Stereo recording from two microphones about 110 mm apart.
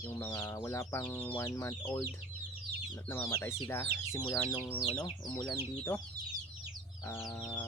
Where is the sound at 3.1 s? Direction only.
20° left (ahead or behind).